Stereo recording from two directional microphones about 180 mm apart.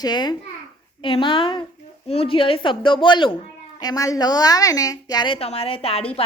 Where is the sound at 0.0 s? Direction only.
25° left (ahead or behind).